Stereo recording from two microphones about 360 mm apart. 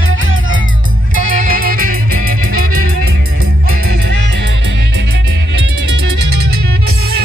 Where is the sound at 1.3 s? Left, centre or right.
Right.